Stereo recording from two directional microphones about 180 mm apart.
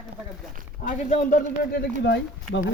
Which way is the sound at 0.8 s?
45° left (ahead or behind).